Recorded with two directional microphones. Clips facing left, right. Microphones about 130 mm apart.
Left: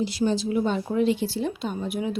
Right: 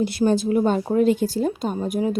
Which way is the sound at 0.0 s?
55° right (ahead or behind).